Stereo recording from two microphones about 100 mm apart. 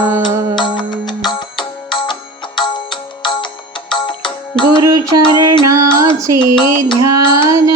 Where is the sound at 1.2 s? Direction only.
50° left (ahead or behind).